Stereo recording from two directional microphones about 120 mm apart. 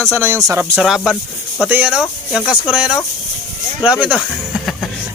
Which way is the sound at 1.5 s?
10° right (ahead or behind).